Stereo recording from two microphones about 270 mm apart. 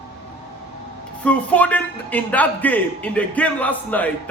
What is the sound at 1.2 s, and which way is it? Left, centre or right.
A man's voice, centre.